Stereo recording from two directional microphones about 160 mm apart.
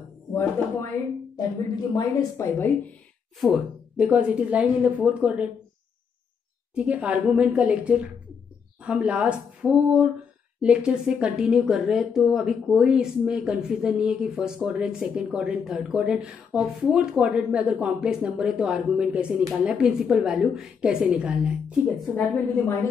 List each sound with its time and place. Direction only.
0.3 s speech: 15° left (ahead or behind)
2.0 s a woman's voice: 15° left (ahead or behind)
3.3 s speech: centre (ahead or behind)
6.7 s a woman's voice: 5° right (ahead or behind)
22.1 s a woman's voice: 10° left (ahead or behind)